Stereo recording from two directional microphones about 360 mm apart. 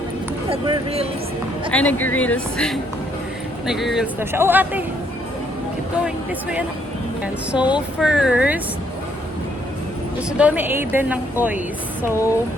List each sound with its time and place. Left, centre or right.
0.5 s speech: centre
1.7 s speech: centre
7.5 s speech: centre
10.2 s speech: centre